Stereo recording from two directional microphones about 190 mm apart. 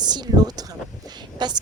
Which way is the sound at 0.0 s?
20° right (ahead or behind).